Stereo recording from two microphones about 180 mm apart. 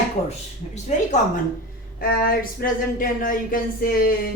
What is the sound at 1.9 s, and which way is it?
Speech, 50° left (ahead or behind).